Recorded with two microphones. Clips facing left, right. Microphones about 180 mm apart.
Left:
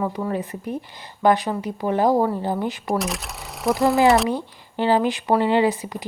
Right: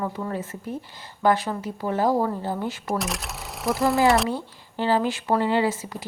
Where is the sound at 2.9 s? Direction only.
Centre (ahead or behind).